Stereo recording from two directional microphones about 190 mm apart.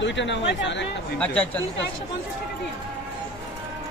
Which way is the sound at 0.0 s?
70° left (ahead or behind).